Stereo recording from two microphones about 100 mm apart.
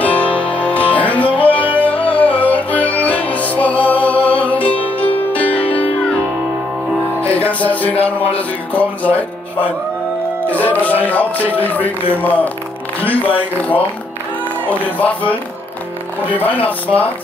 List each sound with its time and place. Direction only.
0.0 s music: 15° left (ahead or behind)
7.2 s music: 15° left (ahead or behind)
7.9 s speech: 80° left
8.4 s music: 15° left (ahead or behind)
10.5 s music: 15° left (ahead or behind)
16.8 s music: 15° left (ahead or behind)